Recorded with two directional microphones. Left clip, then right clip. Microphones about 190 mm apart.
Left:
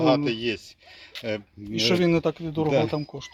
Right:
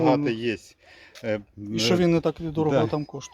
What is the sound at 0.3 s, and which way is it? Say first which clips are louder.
Speech: even; 30° right (ahead or behind).